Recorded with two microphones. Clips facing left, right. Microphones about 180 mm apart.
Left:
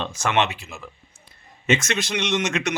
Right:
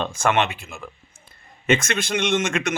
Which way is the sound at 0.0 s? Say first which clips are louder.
Right 2 dB; 50° right (ahead or behind).